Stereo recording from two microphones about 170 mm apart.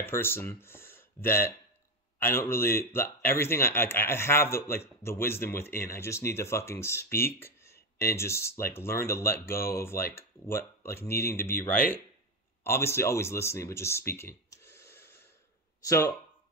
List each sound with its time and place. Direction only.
0.0 s speech: 15° left (ahead or behind)